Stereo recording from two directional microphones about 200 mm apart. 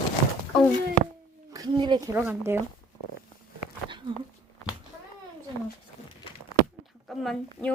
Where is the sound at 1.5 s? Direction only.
20° right (ahead or behind).